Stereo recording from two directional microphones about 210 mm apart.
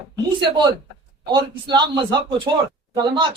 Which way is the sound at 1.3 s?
20° right (ahead or behind).